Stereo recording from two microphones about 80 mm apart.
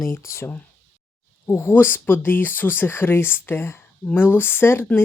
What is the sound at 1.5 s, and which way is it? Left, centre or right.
Speech, left.